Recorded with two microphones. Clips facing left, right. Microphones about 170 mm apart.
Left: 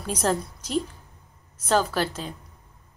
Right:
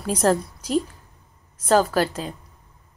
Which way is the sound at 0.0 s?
Centre (ahead or behind).